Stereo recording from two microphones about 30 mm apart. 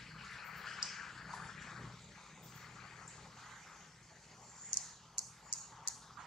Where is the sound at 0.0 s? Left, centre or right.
Centre.